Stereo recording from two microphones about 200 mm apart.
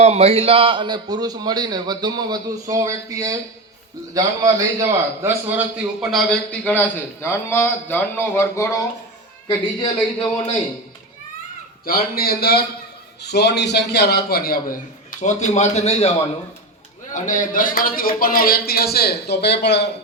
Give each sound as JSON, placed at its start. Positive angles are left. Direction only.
{"t": 0.0, "sound": "a man's voice", "side_deg": -30}
{"t": 11.9, "sound": "a man's voice", "side_deg": 50}
{"t": 17.2, "sound": "speech", "side_deg": 40}